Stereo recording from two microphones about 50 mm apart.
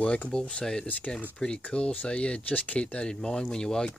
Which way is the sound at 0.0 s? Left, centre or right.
Left.